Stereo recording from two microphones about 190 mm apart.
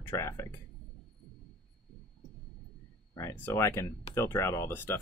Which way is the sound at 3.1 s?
15° left (ahead or behind).